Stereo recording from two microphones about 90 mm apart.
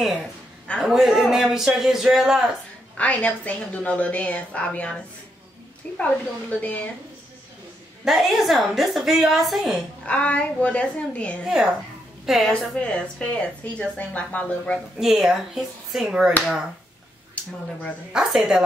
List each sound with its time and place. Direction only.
0.7 s a woman's voice: centre (ahead or behind)
3.0 s a woman's voice: 15° left (ahead or behind)
8.0 s a woman's voice: centre (ahead or behind)
10.0 s a woman's voice: 15° left (ahead or behind)
11.4 s a woman's voice: 10° right (ahead or behind)
12.7 s a woman's voice: 10° left (ahead or behind)
15.0 s a woman's voice: 5° right (ahead or behind)
18.1 s a woman's voice: 5° right (ahead or behind)